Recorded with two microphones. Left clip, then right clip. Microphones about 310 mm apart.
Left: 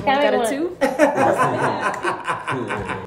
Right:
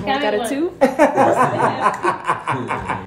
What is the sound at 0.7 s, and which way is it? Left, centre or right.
Chuckle, centre.